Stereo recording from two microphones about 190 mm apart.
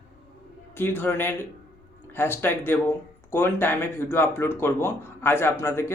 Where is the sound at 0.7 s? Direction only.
10° left (ahead or behind).